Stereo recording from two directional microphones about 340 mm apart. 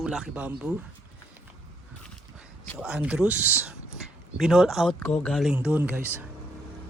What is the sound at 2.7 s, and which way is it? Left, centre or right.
Speech, centre.